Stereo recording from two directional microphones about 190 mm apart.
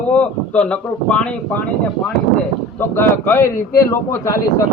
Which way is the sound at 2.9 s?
10° left (ahead or behind).